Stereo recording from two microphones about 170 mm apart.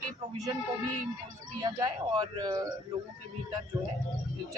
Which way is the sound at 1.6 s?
25° right (ahead or behind).